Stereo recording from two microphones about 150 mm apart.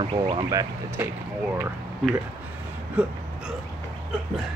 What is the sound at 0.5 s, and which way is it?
Speech, 15° right (ahead or behind).